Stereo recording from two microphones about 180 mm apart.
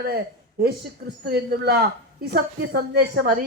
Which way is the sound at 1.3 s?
65° right (ahead or behind).